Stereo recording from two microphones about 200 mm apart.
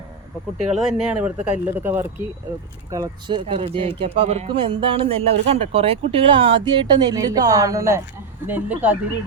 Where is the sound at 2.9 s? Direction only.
20° right (ahead or behind).